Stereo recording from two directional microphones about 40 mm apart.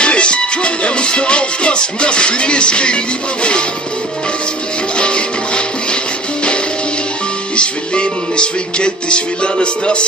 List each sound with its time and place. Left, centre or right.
0.0 s music: left
4.9 s music: left
7.5 s music: left